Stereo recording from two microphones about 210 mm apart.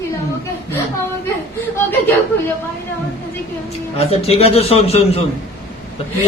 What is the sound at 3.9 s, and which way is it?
A man's voice, 30° left (ahead or behind).